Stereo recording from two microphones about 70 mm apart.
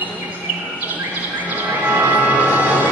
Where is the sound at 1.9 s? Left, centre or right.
Right.